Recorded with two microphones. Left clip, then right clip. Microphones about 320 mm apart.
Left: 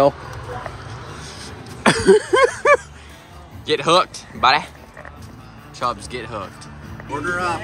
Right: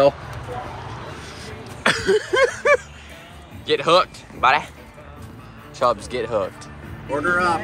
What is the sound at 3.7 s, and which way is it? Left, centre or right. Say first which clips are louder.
Speech: left 1 dB; centre.